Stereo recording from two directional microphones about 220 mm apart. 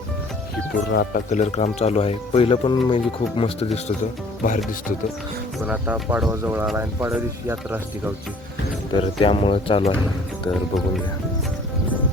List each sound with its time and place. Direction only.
0.9 s speech: 45° left (ahead or behind)
1.3 s speech: 30° left (ahead or behind)
5.6 s speech: 5° right (ahead or behind)
8.9 s speech: 25° left (ahead or behind)